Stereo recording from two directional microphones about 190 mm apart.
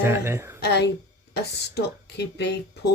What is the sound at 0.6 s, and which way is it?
Speech, 60° left (ahead or behind).